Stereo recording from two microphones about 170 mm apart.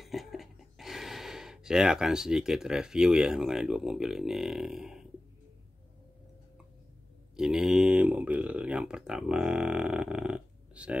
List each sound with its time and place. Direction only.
0.0 s speech: centre (ahead or behind)
7.3 s speech: 5° right (ahead or behind)